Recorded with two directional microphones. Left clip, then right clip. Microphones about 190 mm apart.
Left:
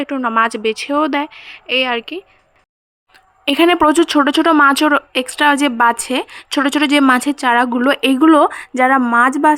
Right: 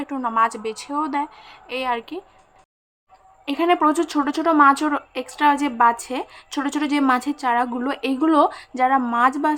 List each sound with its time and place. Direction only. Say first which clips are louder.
0.0 s speech: left 5 dB; 30° left (ahead or behind)
3.4 s speech: left 7 dB; 40° left (ahead or behind)